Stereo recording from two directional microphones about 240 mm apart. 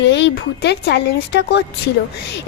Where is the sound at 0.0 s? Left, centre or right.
Left.